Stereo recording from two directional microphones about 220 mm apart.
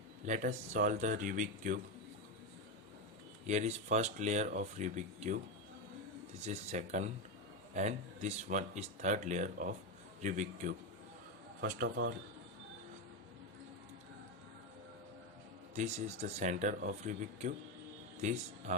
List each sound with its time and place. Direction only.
0.3 s speech: 35° right (ahead or behind)
3.4 s speech: 30° right (ahead or behind)
6.4 s speech: 30° right (ahead or behind)
11.6 s speech: 45° right (ahead or behind)
15.7 s speech: 30° right (ahead or behind)